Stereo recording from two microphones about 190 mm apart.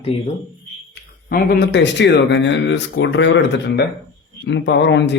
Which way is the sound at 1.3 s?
55° left (ahead or behind).